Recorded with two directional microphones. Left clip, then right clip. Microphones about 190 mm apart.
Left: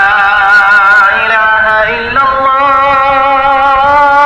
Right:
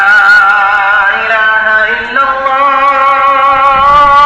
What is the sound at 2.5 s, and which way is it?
Music, 35° left (ahead or behind).